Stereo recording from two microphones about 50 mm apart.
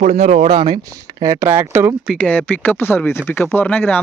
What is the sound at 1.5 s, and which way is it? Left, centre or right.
Speech, right.